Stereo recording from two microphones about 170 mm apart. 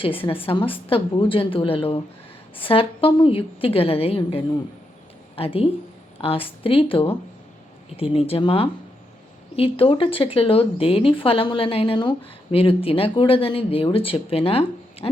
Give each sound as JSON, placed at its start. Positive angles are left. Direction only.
{"t": 0.0, "sound": "speech", "side_deg": 30}